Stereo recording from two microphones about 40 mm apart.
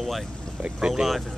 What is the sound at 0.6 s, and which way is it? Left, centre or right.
Speech, centre.